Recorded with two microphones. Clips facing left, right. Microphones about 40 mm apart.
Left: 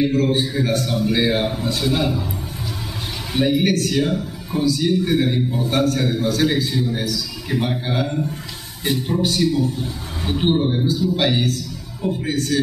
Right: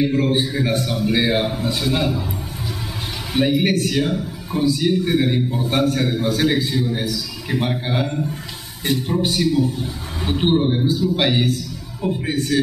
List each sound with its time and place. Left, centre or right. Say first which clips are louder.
0.1 s a man's voice: even; centre
3.3 s a man's voice: even; centre